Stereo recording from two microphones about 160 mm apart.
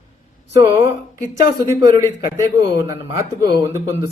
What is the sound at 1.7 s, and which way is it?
A man's voice, 20° right (ahead or behind).